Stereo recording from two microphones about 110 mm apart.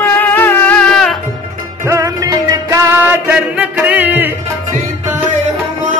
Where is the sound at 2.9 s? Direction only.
15° right (ahead or behind).